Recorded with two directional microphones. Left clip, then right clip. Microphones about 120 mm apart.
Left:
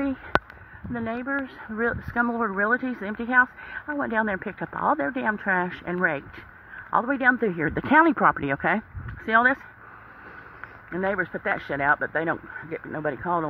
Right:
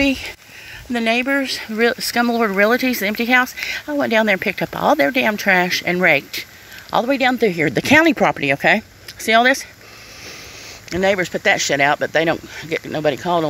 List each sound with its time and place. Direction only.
0.0 s speech: 40° right (ahead or behind)
1.4 s speech: 30° right (ahead or behind)
7.1 s speech: 5° right (ahead or behind)
11.0 s speech: 40° right (ahead or behind)